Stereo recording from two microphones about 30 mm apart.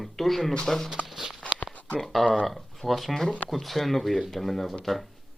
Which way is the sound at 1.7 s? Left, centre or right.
Left.